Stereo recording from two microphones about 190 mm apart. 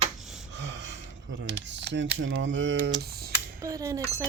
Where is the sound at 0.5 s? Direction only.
65° right (ahead or behind).